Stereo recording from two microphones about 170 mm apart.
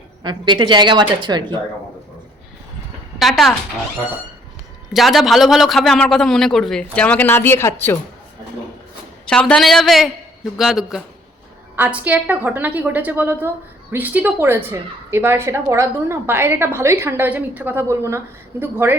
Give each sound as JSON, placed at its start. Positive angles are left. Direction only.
{"t": 0.2, "sound": "a woman's voice", "side_deg": -25}
{"t": 3.2, "sound": "a man's voice", "side_deg": 0}
{"t": 4.9, "sound": "a man's voice", "side_deg": 0}
{"t": 9.2, "sound": "a man's voice", "side_deg": 5}